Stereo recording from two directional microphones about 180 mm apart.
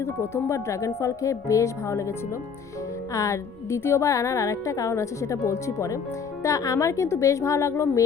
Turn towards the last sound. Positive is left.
turn(degrees=15)  # may be behind; listen again after turning